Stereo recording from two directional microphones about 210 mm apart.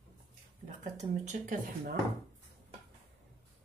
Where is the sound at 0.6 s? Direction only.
35° right (ahead or behind).